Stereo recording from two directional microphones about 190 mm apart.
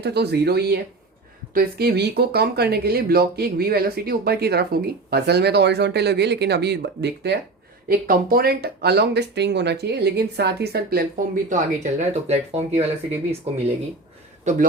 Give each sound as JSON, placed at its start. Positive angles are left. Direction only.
{"t": 0.0, "sound": "speech", "side_deg": -60}
{"t": 7.9, "sound": "speech", "side_deg": -50}
{"t": 14.5, "sound": "a man's voice", "side_deg": -40}